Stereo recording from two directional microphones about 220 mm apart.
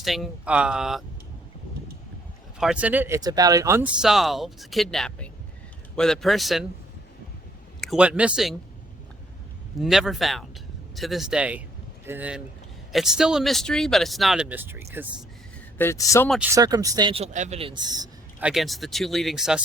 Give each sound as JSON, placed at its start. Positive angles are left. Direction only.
{"t": 0.0, "sound": "speech", "side_deg": 0}
{"t": 2.6, "sound": "speech", "side_deg": -5}
{"t": 7.8, "sound": "speech", "side_deg": -5}
{"t": 9.8, "sound": "speech", "side_deg": 0}
{"t": 15.8, "sound": "speech", "side_deg": 15}
{"t": 16.3, "sound": "speech", "side_deg": -10}
{"t": 18.3, "sound": "speech", "side_deg": -5}